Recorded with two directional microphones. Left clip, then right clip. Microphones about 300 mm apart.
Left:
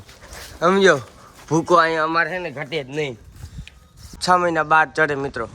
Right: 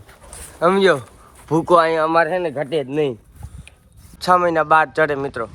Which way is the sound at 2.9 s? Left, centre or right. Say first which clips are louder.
Right 6 dB; right.